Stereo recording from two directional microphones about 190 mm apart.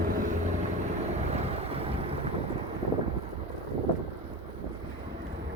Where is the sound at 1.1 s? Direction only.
35° right (ahead or behind).